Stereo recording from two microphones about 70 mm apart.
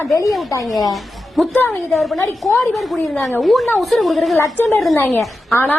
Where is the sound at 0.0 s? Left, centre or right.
Left.